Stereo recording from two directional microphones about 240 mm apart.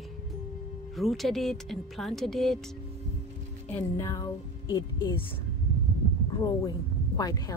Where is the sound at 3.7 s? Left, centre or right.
Centre.